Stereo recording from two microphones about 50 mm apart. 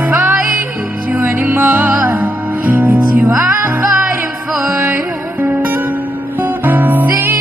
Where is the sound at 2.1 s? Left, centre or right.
Right.